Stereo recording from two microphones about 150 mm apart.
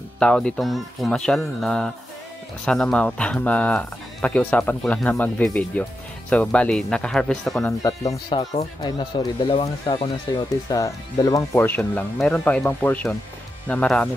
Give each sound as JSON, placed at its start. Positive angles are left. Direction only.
{"t": 0.2, "sound": "speech", "side_deg": 5}
{"t": 7.6, "sound": "speech", "side_deg": 20}